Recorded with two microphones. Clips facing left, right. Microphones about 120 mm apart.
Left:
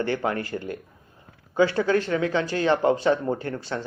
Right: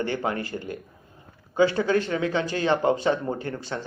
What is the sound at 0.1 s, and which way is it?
Speech, 20° right (ahead or behind).